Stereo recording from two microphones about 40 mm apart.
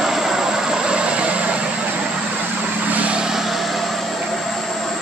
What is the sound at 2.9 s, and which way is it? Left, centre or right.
Vehicle, right.